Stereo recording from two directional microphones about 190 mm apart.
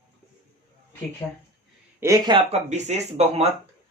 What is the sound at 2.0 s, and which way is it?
Speech, 20° right (ahead or behind).